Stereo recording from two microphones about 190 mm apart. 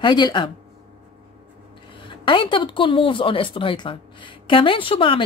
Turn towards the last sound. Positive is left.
turn(degrees=25)  # may be behind; listen again after turning